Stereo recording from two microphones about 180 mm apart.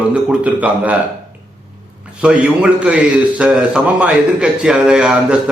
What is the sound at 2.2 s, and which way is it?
A man's voice, 5° right (ahead or behind).